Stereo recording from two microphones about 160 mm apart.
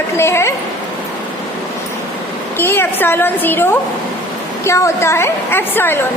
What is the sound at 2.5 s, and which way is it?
A woman's voice, 15° left (ahead or behind).